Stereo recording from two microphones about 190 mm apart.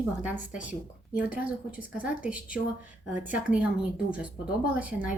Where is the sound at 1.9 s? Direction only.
5° right (ahead or behind).